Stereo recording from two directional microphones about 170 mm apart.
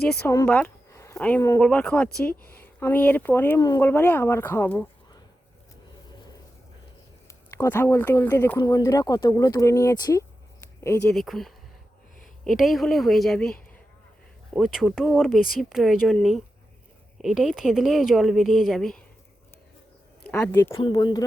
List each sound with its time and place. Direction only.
0.4 s speech: 10° left (ahead or behind)
7.5 s speech: 15° left (ahead or behind)
11.1 s speech: centre (ahead or behind)
20.2 s speech: 10° left (ahead or behind)
20.7 s speech: 30° left (ahead or behind)